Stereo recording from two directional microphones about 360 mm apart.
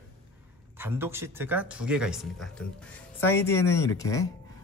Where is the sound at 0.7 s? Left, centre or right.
Centre.